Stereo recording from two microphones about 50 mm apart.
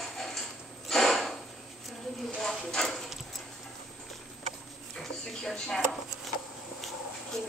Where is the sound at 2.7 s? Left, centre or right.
Centre.